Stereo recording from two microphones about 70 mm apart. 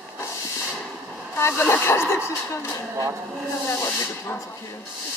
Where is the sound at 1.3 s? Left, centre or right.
Left.